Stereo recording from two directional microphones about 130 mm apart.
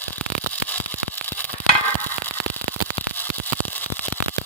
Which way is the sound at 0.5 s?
10° left (ahead or behind).